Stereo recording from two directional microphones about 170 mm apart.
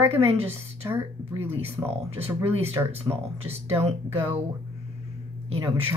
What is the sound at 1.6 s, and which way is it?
Speech, 35° right (ahead or behind).